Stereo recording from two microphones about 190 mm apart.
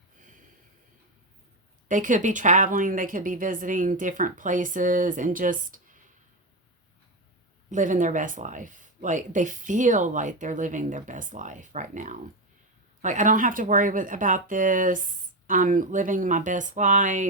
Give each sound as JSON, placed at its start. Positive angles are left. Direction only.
{"t": 1.9, "sound": "speech", "side_deg": -45}
{"t": 7.7, "sound": "speech", "side_deg": -40}